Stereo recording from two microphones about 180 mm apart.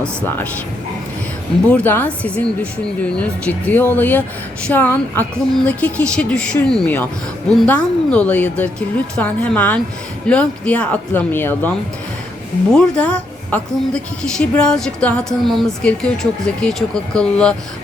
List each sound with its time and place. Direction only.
0.0 s speech: 10° left (ahead or behind)
1.7 s speech: 10° left (ahead or behind)
12.7 s a woman's voice: 5° left (ahead or behind)